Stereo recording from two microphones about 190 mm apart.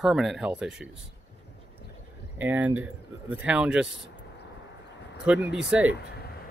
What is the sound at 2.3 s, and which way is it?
Speech, 10° right (ahead or behind).